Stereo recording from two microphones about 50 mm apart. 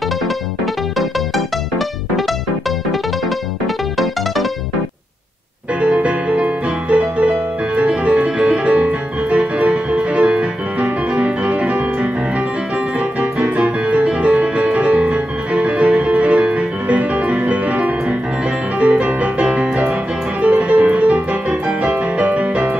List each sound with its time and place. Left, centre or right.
5.8 s music: right
13.8 s music: right